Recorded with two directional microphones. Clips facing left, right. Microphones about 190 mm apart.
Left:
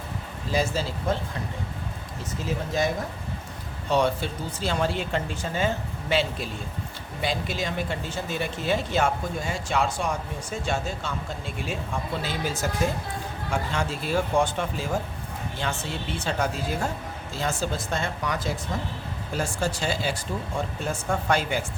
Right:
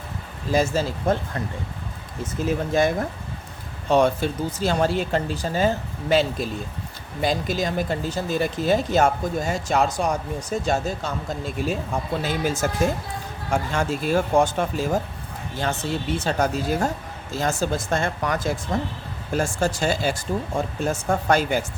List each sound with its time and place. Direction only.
0.5 s speech: 45° right (ahead or behind)
2.7 s speech: 55° right (ahead or behind)